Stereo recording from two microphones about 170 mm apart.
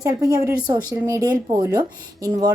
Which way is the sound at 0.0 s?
20° right (ahead or behind).